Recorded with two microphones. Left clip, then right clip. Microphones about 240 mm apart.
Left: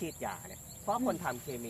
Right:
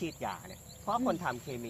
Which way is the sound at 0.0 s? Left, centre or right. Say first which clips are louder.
Right 1 dB; right.